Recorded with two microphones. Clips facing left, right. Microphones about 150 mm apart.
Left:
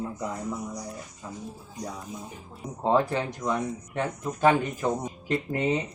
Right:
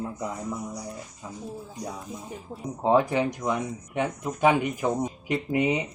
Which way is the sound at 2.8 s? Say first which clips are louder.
Right 2 dB; 15° right (ahead or behind).